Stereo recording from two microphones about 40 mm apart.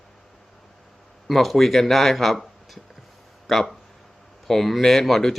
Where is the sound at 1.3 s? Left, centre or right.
Centre.